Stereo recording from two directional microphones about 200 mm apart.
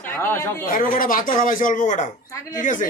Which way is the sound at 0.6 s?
45° left (ahead or behind).